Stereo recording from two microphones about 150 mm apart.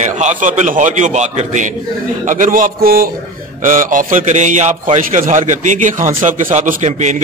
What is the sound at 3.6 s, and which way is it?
A man's voice, 60° right (ahead or behind).